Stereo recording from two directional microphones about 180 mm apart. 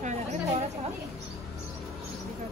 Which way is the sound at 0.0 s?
40° right (ahead or behind).